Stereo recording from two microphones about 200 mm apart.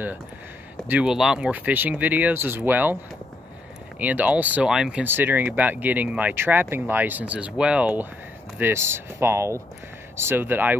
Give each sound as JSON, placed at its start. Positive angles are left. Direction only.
{"t": 0.8, "sound": "speech", "side_deg": -5}
{"t": 4.0, "sound": "speech", "side_deg": -10}